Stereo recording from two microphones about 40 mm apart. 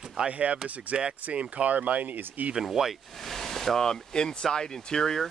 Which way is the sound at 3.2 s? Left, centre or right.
Centre.